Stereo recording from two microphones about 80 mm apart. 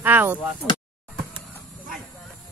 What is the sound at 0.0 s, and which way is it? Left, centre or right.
Speech, right.